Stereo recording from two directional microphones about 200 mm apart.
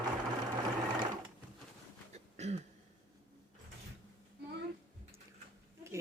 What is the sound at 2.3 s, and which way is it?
Throat clearing, 35° right (ahead or behind).